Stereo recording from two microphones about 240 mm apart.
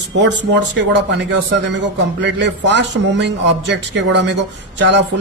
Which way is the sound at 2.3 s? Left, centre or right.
Right.